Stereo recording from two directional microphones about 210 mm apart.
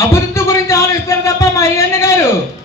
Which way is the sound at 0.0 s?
10° left (ahead or behind).